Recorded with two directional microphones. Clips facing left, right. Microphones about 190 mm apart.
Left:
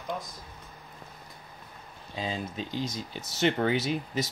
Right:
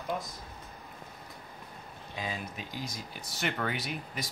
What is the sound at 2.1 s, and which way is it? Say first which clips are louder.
Speech: left 5 dB; 25° left (ahead or behind).